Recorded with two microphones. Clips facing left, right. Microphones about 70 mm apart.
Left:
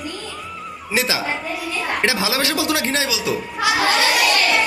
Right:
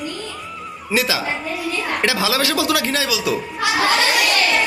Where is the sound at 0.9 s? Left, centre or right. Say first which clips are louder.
Right 1 dB; left.